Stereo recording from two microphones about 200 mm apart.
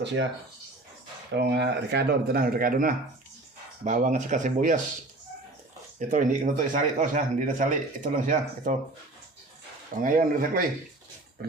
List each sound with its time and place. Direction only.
0.0 s speech: 60° right (ahead or behind)
1.4 s speech: 60° right (ahead or behind); by 4.8 s 40° right (ahead or behind)
6.0 s speech: 40° right (ahead or behind)
10.0 s speech: 45° right (ahead or behind)